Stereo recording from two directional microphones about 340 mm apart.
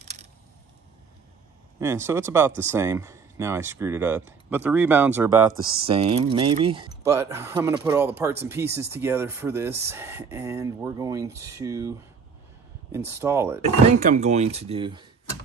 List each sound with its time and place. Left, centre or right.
0.0 s a sound: centre
1.8 s speech: centre
12.9 s speech: centre
13.8 s speech: right